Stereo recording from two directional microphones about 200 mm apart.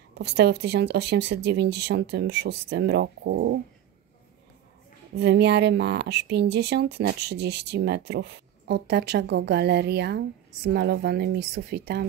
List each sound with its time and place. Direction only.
0.2 s speech: 55° right (ahead or behind)
5.1 s speech: 55° right (ahead or behind)